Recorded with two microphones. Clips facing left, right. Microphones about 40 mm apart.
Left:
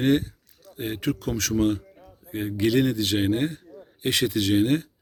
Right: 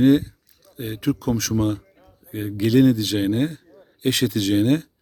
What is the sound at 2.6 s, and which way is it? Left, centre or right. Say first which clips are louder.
Speech: right 5 dB; centre.